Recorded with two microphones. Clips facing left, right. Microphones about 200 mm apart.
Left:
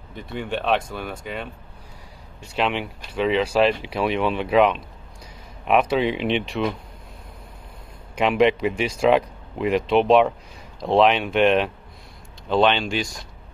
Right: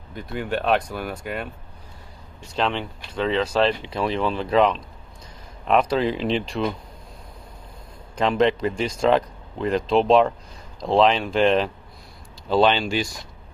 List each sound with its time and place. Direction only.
0.1 s speech: 5° right (ahead or behind)
2.5 s speech: 5° left (ahead or behind)
8.2 s speech: 5° left (ahead or behind)